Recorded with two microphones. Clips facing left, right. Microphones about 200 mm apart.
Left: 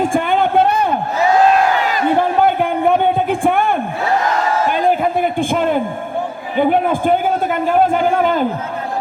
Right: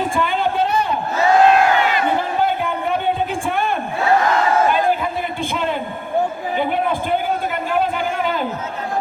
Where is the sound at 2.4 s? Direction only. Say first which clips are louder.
Left 6 dB; 55° left (ahead or behind).